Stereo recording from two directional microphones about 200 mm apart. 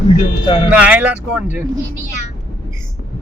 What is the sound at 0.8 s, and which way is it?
Speech, 5° right (ahead or behind).